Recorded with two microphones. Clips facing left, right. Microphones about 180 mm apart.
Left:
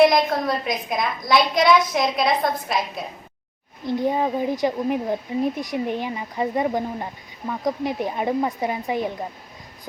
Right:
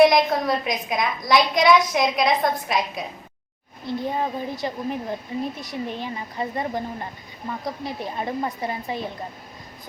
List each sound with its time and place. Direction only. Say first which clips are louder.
0.0 s a woman's voice: even; centre (ahead or behind)
3.8 s a woman's voice: left 4 dB; 15° left (ahead or behind)